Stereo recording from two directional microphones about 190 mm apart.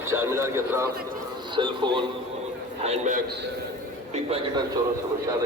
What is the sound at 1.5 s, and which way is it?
Speech, 25° right (ahead or behind).